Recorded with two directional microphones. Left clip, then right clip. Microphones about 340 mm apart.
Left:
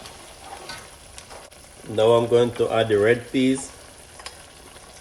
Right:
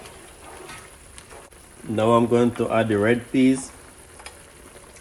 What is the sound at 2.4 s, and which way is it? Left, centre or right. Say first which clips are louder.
Speech: left 1 dB; right.